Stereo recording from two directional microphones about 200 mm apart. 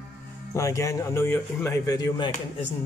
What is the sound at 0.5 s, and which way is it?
Speech, 15° left (ahead or behind).